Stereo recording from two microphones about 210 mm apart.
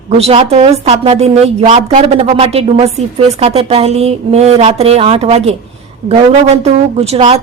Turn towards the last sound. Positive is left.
turn(degrees=-30)  # may be behind; listen again after turning